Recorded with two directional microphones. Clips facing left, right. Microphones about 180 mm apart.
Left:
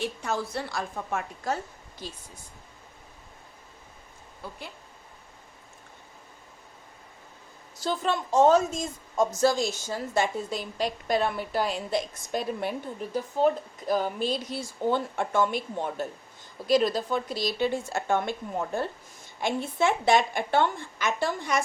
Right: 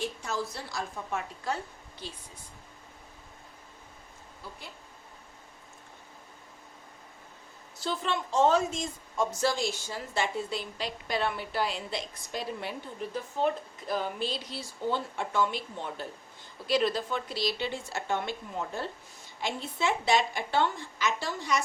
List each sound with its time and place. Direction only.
0.0 s a woman's voice: 60° left (ahead or behind)
7.8 s a woman's voice: 40° left (ahead or behind)